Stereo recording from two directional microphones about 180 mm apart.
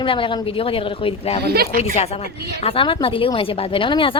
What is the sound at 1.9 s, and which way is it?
A woman's voice, 35° left (ahead or behind).